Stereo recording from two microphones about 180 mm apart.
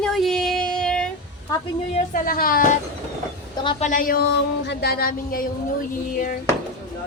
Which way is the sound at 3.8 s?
50° left (ahead or behind).